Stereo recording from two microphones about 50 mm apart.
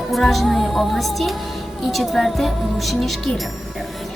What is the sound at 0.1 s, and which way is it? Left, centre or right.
A woman's voice, centre.